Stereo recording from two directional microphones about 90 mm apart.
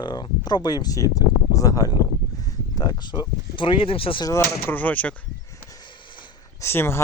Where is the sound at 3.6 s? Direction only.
75° left (ahead or behind).